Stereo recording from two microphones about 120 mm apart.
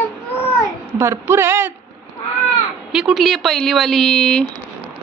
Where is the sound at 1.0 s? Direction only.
20° right (ahead or behind).